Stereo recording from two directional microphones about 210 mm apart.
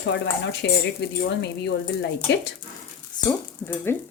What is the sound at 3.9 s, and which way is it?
Speech, 10° left (ahead or behind).